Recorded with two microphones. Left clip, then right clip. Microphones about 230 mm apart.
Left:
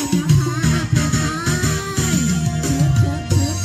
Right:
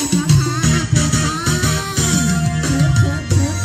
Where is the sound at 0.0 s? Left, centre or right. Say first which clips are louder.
Right 2 dB; right.